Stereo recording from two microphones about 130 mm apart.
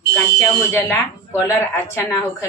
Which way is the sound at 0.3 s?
20° left (ahead or behind).